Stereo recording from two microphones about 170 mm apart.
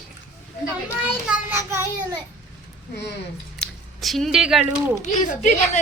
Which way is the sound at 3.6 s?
Centre (ahead or behind).